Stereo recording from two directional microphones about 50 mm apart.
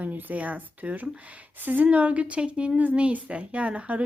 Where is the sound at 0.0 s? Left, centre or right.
Right.